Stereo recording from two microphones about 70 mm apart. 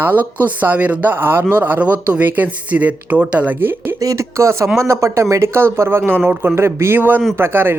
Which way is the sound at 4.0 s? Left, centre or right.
Right.